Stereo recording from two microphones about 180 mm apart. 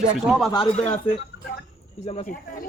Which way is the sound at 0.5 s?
35° left (ahead or behind).